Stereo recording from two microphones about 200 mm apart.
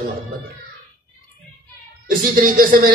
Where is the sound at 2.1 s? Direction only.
45° right (ahead or behind).